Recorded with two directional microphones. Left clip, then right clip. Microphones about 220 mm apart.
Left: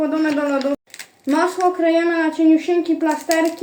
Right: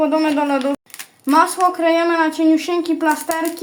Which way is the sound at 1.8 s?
50° right (ahead or behind).